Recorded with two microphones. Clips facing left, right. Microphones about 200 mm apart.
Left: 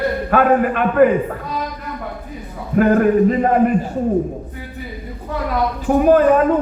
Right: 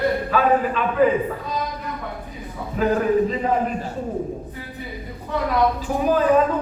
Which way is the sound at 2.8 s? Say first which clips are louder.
Left 6 dB; 60° left (ahead or behind).